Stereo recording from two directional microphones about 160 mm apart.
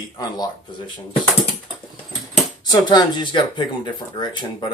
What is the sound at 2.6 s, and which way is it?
Speech, 25° left (ahead or behind).